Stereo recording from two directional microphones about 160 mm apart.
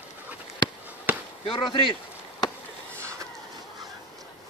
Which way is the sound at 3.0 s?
20° right (ahead or behind).